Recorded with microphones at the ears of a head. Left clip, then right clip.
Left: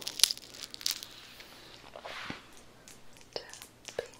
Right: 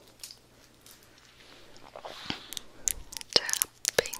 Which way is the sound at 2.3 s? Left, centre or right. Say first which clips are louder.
Right 7 dB; right.